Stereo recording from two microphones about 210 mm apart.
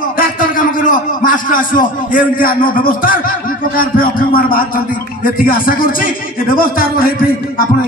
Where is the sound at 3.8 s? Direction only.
40° left (ahead or behind).